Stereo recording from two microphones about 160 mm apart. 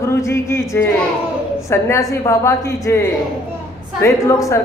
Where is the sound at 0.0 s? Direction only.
15° left (ahead or behind).